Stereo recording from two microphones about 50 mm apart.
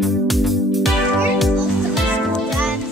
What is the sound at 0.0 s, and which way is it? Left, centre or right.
Music, centre.